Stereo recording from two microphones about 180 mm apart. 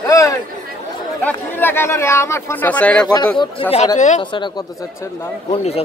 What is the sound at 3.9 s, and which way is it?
Speech, 40° left (ahead or behind).